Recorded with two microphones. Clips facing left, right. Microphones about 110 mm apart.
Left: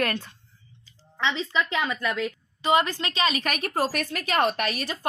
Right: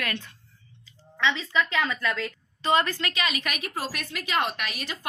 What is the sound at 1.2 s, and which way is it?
Speech, 30° left (ahead or behind).